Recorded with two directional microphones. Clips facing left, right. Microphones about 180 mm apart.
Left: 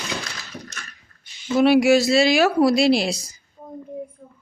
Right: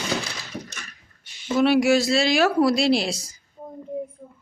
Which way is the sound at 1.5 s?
5° left (ahead or behind).